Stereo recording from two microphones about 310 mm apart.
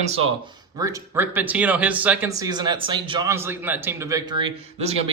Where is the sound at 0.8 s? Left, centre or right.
Centre.